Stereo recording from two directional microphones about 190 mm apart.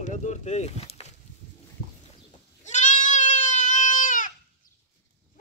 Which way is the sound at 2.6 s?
40° left (ahead or behind).